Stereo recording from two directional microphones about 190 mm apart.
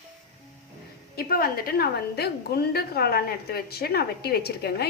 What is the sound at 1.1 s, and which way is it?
A woman's voice, 50° left (ahead or behind).